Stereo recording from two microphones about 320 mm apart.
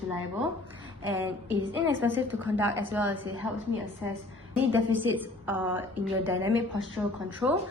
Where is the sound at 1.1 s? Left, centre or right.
Centre.